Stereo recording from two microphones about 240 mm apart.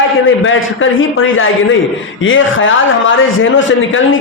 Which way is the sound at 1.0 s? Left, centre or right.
Left.